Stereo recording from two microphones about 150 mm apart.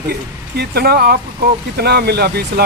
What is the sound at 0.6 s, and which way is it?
Speech, 90° right.